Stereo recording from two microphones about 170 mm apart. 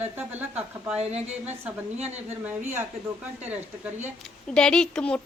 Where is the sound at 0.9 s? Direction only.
40° right (ahead or behind).